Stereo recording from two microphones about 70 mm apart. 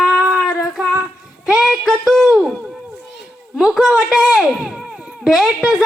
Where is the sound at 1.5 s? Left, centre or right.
Centre.